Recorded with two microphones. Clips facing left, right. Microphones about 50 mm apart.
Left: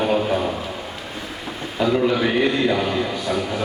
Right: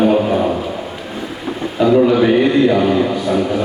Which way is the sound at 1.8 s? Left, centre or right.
Centre.